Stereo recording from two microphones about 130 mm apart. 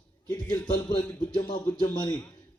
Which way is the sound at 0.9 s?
35° left (ahead or behind).